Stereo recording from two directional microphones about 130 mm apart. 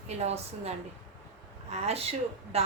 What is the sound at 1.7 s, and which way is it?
Speech, 50° right (ahead or behind).